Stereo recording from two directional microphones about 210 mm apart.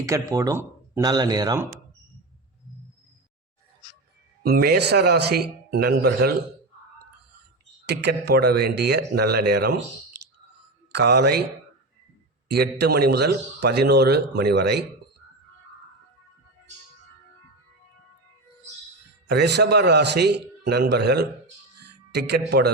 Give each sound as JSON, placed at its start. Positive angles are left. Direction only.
{"t": 0.0, "sound": "speech", "side_deg": -15}
{"t": 4.4, "sound": "a man's voice", "side_deg": -45}
{"t": 7.9, "sound": "a man's voice", "side_deg": -50}
{"t": 12.5, "sound": "a man's voice", "side_deg": -50}
{"t": 19.3, "sound": "a man's voice", "side_deg": -50}